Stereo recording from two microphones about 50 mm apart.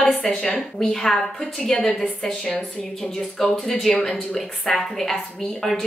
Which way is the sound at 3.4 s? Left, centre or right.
Centre.